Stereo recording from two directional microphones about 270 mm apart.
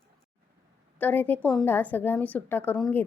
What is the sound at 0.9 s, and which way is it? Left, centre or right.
A woman's voice, centre.